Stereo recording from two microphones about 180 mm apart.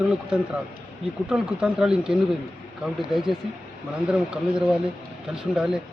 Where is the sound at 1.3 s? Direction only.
5° right (ahead or behind).